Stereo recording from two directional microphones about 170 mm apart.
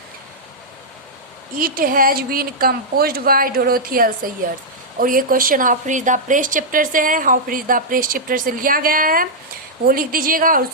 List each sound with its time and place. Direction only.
1.5 s a woman's voice: 55° right (ahead or behind)